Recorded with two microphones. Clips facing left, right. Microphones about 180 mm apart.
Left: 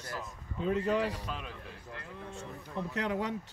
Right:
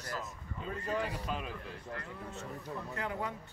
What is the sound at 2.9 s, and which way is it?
Speech, 90° left.